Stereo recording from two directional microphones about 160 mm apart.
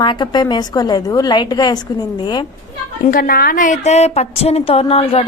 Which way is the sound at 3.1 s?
65° left (ahead or behind).